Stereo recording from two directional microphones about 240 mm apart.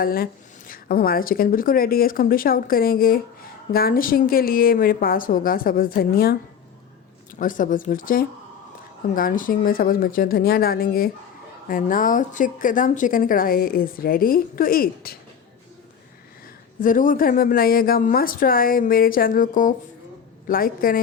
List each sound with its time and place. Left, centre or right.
0.0 s a woman's voice: left
7.3 s a woman's voice: left
16.8 s a woman's voice: left